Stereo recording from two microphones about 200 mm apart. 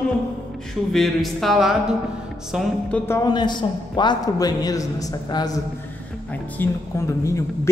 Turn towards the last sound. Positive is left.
turn(degrees=15)  # may be behind; listen again after turning